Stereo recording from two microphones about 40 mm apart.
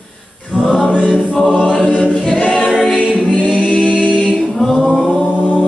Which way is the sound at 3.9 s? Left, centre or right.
Left.